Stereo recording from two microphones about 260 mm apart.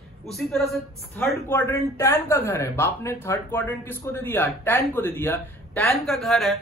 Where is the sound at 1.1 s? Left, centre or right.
Centre.